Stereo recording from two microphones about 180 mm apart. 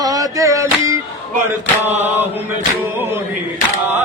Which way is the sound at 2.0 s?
10° right (ahead or behind).